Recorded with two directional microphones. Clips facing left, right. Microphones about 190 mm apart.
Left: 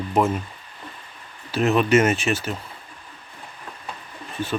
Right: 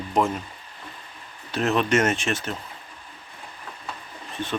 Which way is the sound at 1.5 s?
Centre (ahead or behind).